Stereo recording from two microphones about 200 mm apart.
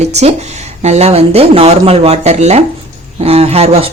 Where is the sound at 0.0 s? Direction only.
35° right (ahead or behind).